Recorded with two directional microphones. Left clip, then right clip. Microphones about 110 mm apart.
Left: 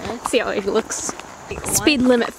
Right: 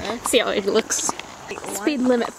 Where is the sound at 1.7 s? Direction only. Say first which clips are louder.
Left 7 dB; 25° left (ahead or behind).